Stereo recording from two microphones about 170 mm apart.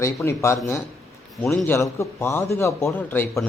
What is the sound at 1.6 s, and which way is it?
A man's voice, 15° left (ahead or behind).